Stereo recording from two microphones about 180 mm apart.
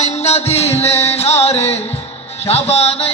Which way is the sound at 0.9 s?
15° left (ahead or behind).